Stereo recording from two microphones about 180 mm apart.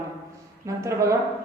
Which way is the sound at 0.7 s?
15° right (ahead or behind).